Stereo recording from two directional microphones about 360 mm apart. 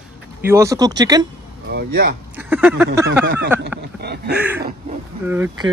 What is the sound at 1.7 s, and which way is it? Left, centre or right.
Speech, right.